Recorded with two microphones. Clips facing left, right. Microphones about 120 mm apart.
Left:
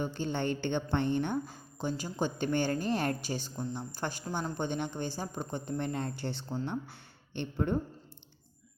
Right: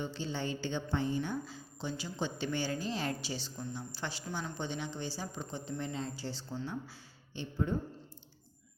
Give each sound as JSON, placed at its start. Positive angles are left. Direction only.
{"t": 0.0, "sound": "a woman's voice", "side_deg": 50}